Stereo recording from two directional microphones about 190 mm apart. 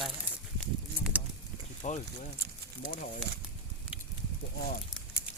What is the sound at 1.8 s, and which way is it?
Speech, 40° left (ahead or behind).